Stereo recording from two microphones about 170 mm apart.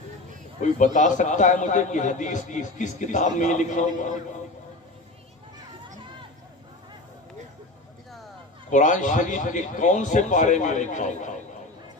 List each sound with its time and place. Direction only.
0.9 s a man's voice: 45° left (ahead or behind)
8.7 s a man's voice: 45° left (ahead or behind)